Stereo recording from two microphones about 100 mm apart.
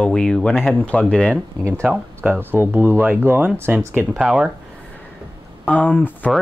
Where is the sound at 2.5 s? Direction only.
20° right (ahead or behind).